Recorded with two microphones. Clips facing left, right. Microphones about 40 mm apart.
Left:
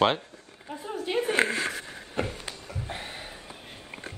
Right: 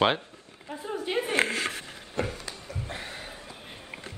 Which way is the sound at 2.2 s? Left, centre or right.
Left.